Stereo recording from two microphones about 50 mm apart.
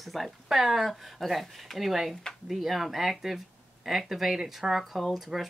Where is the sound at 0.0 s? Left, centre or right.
Centre.